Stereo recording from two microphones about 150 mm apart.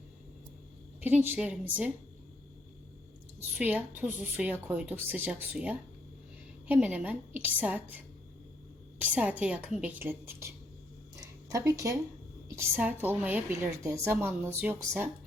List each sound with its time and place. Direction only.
1.0 s a woman's voice: 10° right (ahead or behind)
3.9 s a woman's voice: 10° right (ahead or behind)
11.2 s a sound: 20° right (ahead or behind)
12.5 s a woman's voice: 15° right (ahead or behind)